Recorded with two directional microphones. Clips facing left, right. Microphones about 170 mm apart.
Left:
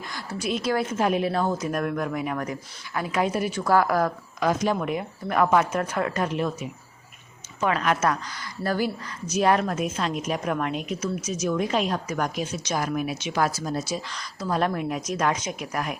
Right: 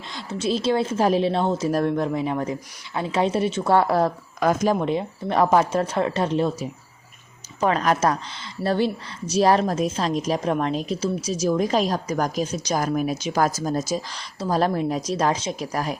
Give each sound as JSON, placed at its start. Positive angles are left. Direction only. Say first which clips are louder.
{"t": 0.1, "sound": "a woman's voice", "louder": "right 4 dB", "side_deg": -25}
{"t": 4.4, "sound": "speech", "louder": "right 3 dB", "side_deg": -50}
{"t": 4.8, "sound": "a woman's voice", "louder": "right 4 dB", "side_deg": -30}
{"t": 14.2, "sound": "speech", "louder": "right 3 dB", "side_deg": -30}